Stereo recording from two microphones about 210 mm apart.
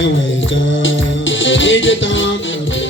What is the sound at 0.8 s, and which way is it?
Music, 65° left (ahead or behind).